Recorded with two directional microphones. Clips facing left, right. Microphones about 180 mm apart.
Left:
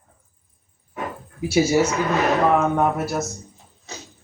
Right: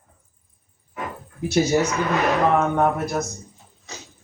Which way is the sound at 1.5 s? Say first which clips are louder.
Left 1 dB; 10° left (ahead or behind).